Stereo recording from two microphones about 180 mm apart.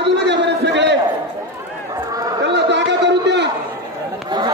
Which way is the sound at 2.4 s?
75° right (ahead or behind).